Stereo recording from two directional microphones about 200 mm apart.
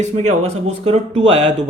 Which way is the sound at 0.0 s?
35° right (ahead or behind).